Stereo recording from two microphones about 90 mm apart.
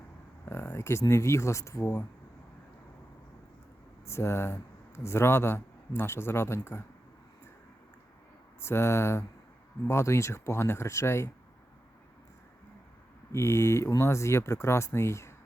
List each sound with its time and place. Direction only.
0.4 s speech: 25° left (ahead or behind)
1.8 s speech: 20° left (ahead or behind)
4.0 s speech: 30° left (ahead or behind)
8.6 s speech: 30° left (ahead or behind)
13.3 s speech: 30° left (ahead or behind)